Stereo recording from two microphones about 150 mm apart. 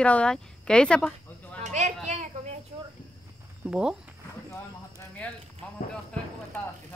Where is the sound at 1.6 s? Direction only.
50° right (ahead or behind).